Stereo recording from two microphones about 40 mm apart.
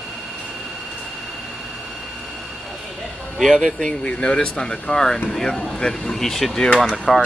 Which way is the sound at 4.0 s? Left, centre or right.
Left.